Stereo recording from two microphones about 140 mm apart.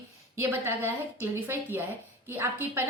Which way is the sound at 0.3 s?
15° right (ahead or behind).